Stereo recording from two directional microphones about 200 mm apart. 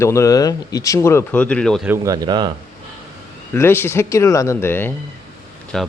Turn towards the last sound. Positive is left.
turn(degrees=5)  # may be behind; listen again after turning